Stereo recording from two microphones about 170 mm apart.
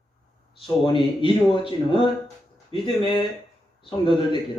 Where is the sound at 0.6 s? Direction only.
30° left (ahead or behind).